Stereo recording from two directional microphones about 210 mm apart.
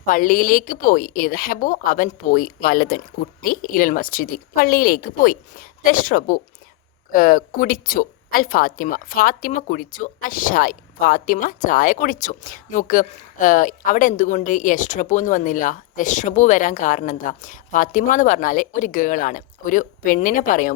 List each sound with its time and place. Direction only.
0.0 s speech: 40° left (ahead or behind)